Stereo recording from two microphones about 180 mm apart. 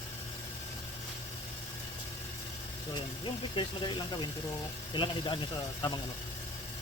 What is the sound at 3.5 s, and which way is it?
Speech, 30° left (ahead or behind).